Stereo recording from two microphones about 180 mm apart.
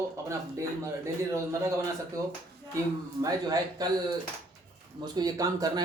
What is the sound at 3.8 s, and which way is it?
Speech, 20° right (ahead or behind).